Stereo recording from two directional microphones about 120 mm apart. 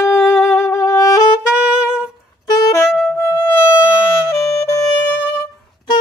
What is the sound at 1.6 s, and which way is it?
Saxophone, 10° right (ahead or behind).